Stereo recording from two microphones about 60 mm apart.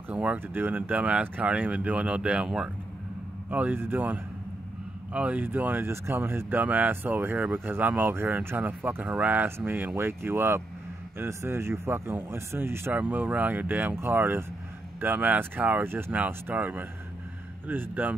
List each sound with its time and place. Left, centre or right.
0.1 s speech: right
3.4 s a man's voice: right
12.9 s speech: right
15.8 s speech: right
16.5 s speech: right